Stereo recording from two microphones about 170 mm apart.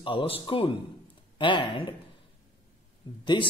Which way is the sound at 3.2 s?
30° left (ahead or behind).